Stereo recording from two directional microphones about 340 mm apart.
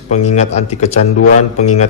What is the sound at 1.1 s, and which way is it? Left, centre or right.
Speech, left.